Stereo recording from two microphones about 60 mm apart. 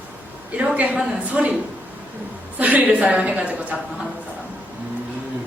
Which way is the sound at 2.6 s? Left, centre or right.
Right.